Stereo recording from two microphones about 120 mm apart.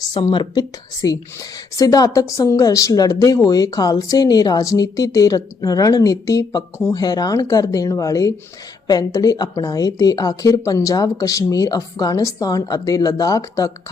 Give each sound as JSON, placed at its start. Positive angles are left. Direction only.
{"t": 0.1, "sound": "speech", "side_deg": 40}
{"t": 1.0, "sound": "a woman's voice", "side_deg": 30}